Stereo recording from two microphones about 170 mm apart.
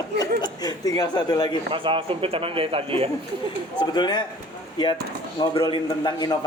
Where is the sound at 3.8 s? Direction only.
25° left (ahead or behind).